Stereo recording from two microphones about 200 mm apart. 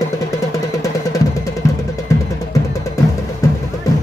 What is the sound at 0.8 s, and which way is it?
Music, 15° left (ahead or behind).